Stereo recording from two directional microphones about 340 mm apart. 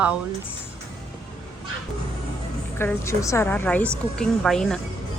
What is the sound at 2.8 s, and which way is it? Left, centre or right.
A woman's voice, centre.